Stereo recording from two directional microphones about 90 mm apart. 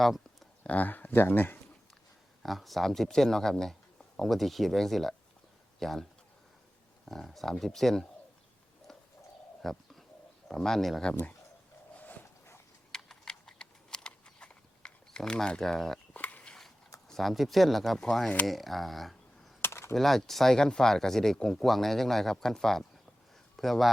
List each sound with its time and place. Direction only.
0.0 s a sound: centre (ahead or behind)
0.6 s speech: 15° left (ahead or behind)
2.4 s speech: centre (ahead or behind)
9.6 s bird: 5° left (ahead or behind)
10.5 s speech: 5° left (ahead or behind)
11.1 s speech: 20° left (ahead or behind)
11.9 s dog: 20° left (ahead or behind)
12.9 s a sound: 5° left (ahead or behind)
16.1 s a sound: 15° left (ahead or behind)
17.1 s speech: centre (ahead or behind)
19.6 s typing: 30° left (ahead or behind)
19.9 s speech: centre (ahead or behind)